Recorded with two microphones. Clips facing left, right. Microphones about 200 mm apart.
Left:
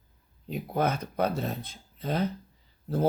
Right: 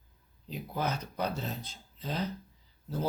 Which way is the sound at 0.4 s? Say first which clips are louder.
Left 6 dB; 55° left (ahead or behind).